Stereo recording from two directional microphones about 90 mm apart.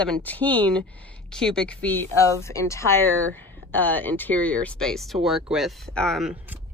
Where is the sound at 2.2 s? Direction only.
35° left (ahead or behind); by 6.2 s 5° left (ahead or behind).